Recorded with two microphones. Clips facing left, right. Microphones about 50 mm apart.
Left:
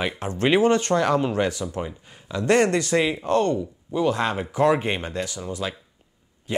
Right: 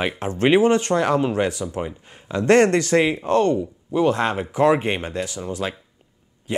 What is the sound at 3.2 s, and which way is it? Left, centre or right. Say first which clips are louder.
A man's voice: right 3 dB; right.